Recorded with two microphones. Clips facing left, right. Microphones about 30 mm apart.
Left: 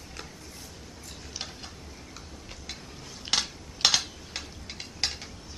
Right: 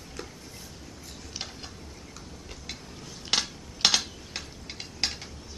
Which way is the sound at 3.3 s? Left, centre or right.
Centre.